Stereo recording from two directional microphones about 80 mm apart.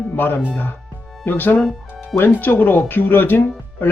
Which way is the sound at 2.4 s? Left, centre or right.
Left.